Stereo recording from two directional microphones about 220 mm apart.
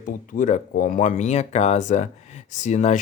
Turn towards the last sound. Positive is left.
turn(degrees=30)  # may be behind; listen again after turning